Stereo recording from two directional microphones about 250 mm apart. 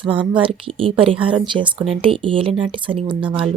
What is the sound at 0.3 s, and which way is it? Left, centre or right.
Speech, right.